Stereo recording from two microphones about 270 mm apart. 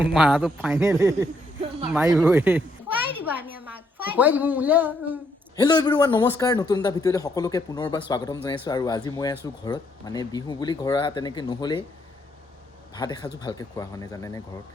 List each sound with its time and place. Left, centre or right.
0.0 s a man's voice: centre
5.5 s a man's voice: centre
12.9 s a man's voice: centre